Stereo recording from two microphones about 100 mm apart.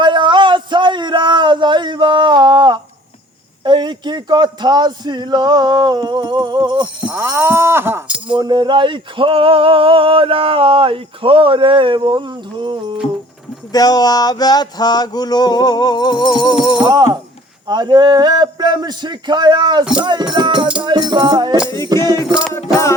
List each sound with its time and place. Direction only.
0.0 s a sound: 50° right (ahead or behind)
3.6 s a man's voice: 50° right (ahead or behind)
7.1 s a sound: 20° right (ahead or behind)
8.3 s male singing: 50° right (ahead or behind)
13.7 s a sound: 40° left (ahead or behind)
16.9 s a man's voice: 45° right (ahead or behind)
19.8 s music: 10° right (ahead or behind)
20.3 s a man's voice: 50° right (ahead or behind)
22.5 s music: 30° left (ahead or behind)